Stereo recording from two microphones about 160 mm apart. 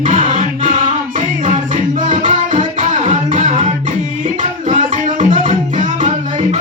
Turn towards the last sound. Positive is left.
turn(degrees=-45)  # may be behind; listen again after turning